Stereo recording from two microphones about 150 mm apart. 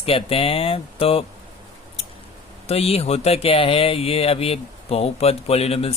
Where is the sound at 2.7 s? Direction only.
40° left (ahead or behind).